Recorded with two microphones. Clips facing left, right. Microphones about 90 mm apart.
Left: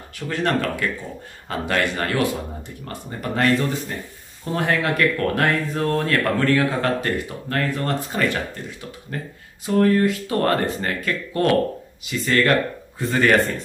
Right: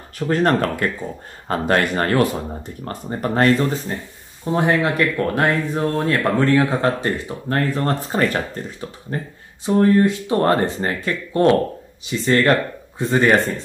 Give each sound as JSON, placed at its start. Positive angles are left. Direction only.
{"t": 0.2, "sound": "speech", "side_deg": -40}
{"t": 4.5, "sound": "speech", "side_deg": -20}
{"t": 9.7, "sound": "speech", "side_deg": -25}